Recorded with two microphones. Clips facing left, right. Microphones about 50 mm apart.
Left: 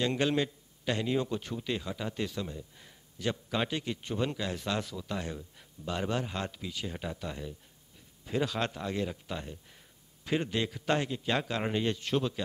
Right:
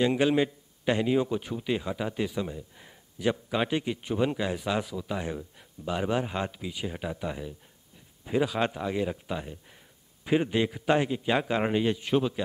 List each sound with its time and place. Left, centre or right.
0.0 s a man's voice: centre